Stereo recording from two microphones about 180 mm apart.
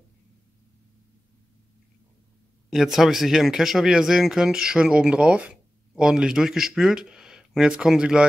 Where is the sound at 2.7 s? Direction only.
Centre (ahead or behind).